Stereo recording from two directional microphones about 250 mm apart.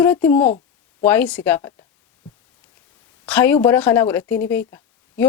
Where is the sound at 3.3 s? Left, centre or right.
Centre.